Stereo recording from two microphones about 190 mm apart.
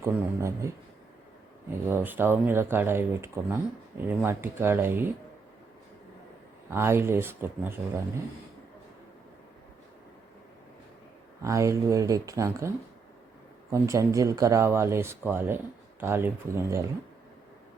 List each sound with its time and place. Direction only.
0.0 s speech: 15° right (ahead or behind)
1.9 s speech: 10° right (ahead or behind)
6.7 s speech: 10° right (ahead or behind)
11.4 s speech: 15° right (ahead or behind)